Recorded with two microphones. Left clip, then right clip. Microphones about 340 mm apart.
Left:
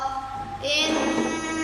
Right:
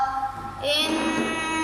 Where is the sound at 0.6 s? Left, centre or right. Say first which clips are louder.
Even; centre.